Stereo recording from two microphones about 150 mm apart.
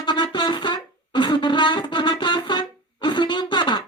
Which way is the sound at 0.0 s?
30° left (ahead or behind).